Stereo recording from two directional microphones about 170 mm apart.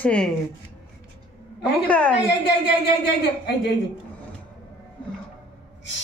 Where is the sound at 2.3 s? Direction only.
80° left.